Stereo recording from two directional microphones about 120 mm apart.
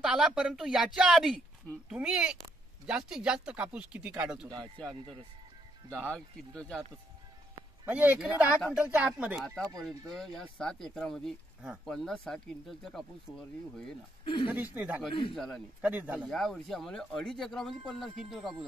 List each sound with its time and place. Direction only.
0.0 s speech: 5° right (ahead or behind)
5.9 s speech: 10° left (ahead or behind)
7.8 s speech: 15° right (ahead or behind)
9.8 s speech: centre (ahead or behind)
14.2 s speech: 45° left (ahead or behind)
14.5 s speech: 15° right (ahead or behind)
15.0 s a man's voice: 45° left (ahead or behind)
15.3 s speech: centre (ahead or behind)
15.8 s speech: 15° right (ahead or behind)
16.3 s speech: 5° left (ahead or behind)